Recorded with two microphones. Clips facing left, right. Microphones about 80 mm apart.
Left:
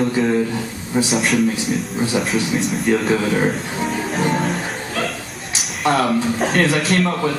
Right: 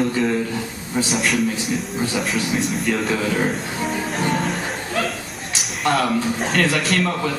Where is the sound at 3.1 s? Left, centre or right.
Centre.